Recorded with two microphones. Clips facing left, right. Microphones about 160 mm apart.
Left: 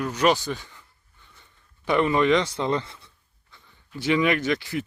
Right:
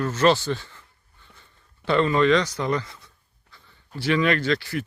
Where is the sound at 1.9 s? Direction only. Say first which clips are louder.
Right 1 dB; 15° left (ahead or behind).